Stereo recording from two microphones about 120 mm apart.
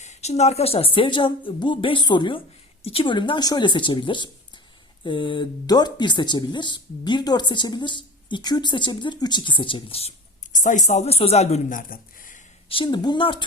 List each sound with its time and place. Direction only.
0.0 s a woman's voice: 70° left (ahead or behind)
12.6 s a woman's voice: 45° left (ahead or behind)